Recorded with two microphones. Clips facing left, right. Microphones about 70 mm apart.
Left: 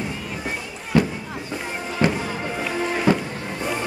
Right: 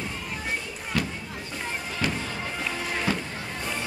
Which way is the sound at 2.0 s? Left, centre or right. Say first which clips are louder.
Left 8 dB; left.